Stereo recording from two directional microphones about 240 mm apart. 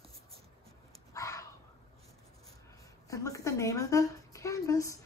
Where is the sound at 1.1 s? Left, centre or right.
Centre.